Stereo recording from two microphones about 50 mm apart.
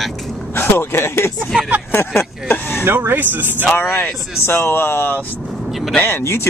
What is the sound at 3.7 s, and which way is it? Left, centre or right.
A man's voice, left.